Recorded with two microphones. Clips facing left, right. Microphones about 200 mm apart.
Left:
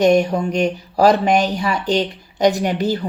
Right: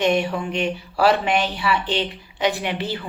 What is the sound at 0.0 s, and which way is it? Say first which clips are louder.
Speech: left 6 dB; 40° left (ahead or behind).